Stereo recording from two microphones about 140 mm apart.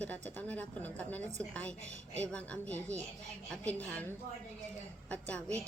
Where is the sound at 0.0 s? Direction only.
10° left (ahead or behind).